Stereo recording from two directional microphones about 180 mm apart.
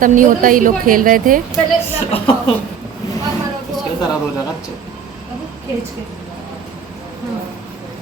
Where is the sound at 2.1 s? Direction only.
30° left (ahead or behind).